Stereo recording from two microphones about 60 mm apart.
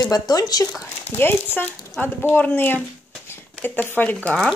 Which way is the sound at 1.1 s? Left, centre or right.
Left.